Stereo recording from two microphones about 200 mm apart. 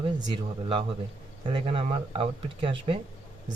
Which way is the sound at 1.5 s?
25° right (ahead or behind).